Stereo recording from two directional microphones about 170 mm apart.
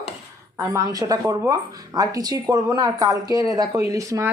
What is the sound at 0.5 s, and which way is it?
Speech, 20° right (ahead or behind).